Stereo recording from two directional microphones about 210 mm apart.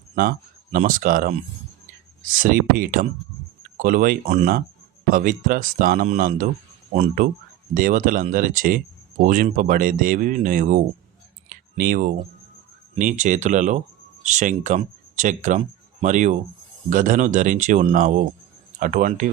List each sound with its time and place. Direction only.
0.2 s speech: 45° right (ahead or behind)
11.4 s a sound: 40° right (ahead or behind)
13.0 s speech: 35° right (ahead or behind)